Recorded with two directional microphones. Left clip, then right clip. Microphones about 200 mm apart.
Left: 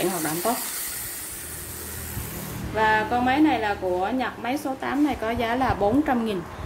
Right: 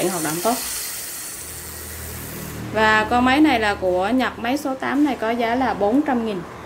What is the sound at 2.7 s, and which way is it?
A woman's voice, 20° right (ahead or behind).